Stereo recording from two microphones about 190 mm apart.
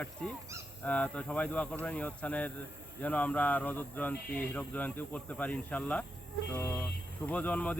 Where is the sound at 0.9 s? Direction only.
5° left (ahead or behind).